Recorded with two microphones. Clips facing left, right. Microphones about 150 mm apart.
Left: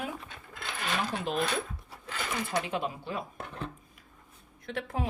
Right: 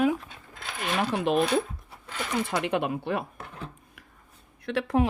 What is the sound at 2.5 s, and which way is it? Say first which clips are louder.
Speech: right 4 dB; 65° right (ahead or behind).